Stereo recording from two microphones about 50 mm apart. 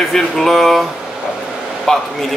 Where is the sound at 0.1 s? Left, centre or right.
Centre.